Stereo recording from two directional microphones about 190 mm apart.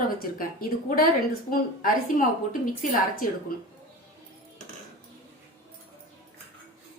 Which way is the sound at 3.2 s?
45° left (ahead or behind).